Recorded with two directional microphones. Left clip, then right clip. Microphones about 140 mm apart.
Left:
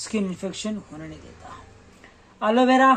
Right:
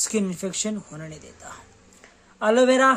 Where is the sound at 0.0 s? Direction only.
40° right (ahead or behind).